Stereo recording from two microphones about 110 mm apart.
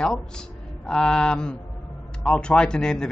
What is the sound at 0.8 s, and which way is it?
Speech, 5° left (ahead or behind).